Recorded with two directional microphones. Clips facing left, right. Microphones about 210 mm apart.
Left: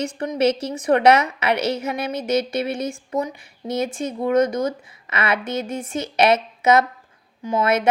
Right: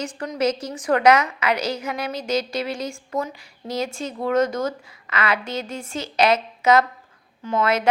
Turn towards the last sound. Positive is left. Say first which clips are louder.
# left 1 dB
turn(degrees=20)  # may be behind; listen again after turning